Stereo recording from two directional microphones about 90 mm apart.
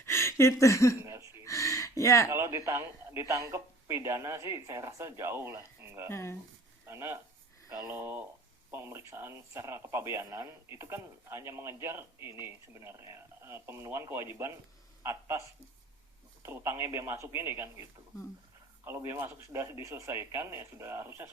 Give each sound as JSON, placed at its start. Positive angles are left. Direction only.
{"t": 0.0, "sound": "a sound", "side_deg": 30}
{"t": 1.0, "sound": "wheeze", "side_deg": -35}
{"t": 1.5, "sound": "a sound", "side_deg": 35}
{"t": 2.3, "sound": "speech", "side_deg": -30}
{"t": 6.1, "sound": "speech", "side_deg": 30}
{"t": 6.8, "sound": "speech", "side_deg": -30}
{"t": 18.9, "sound": "speech", "side_deg": -30}